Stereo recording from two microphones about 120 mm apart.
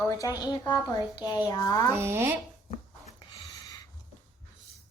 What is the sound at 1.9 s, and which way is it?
Speech, 20° right (ahead or behind).